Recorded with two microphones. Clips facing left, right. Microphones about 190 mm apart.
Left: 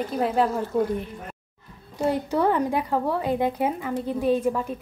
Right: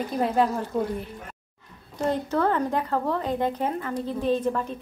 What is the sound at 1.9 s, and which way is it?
A woman's voice, 10° left (ahead or behind).